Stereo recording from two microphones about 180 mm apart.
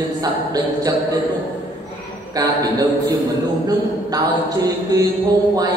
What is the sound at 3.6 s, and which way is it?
A man's voice, 20° right (ahead or behind).